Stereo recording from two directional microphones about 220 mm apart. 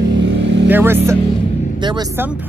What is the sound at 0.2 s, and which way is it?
Vehicle, 55° right (ahead or behind).